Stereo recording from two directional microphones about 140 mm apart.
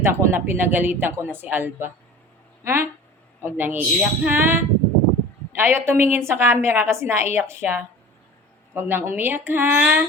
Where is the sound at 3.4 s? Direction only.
15° right (ahead or behind).